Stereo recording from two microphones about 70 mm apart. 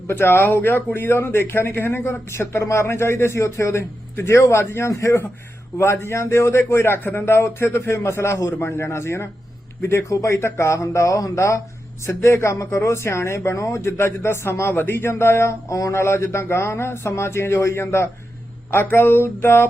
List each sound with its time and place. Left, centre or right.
0.1 s speech: left
8.4 s speech: left
8.6 s speech: left